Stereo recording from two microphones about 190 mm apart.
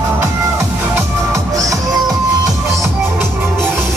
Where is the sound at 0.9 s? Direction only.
15° right (ahead or behind).